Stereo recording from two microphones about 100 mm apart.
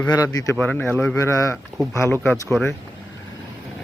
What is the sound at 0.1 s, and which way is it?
Speech, 40° left (ahead or behind).